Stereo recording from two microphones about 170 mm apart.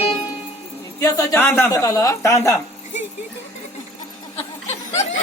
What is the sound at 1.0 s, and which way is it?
A man's voice, 15° left (ahead or behind).